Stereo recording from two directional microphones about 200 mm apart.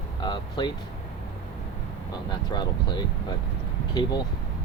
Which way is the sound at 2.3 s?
20° left (ahead or behind).